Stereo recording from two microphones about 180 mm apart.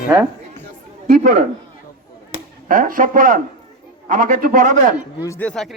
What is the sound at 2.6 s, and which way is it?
A man's voice, 50° right (ahead or behind).